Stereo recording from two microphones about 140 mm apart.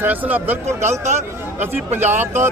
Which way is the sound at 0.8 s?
55° right (ahead or behind).